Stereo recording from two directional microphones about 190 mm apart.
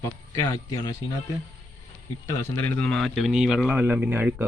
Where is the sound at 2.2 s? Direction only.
15° left (ahead or behind).